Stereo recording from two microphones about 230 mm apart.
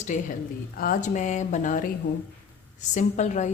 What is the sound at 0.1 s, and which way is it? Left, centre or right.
A woman's voice, left.